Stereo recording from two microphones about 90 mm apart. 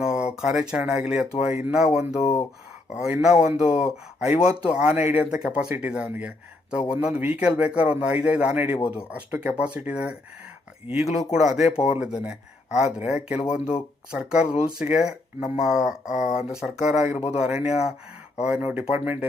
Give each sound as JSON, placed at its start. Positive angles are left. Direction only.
{"t": 0.0, "sound": "a sound", "side_deg": -10}
{"t": 0.9, "sound": "speech", "side_deg": -10}
{"t": 11.0, "sound": "speech", "side_deg": 0}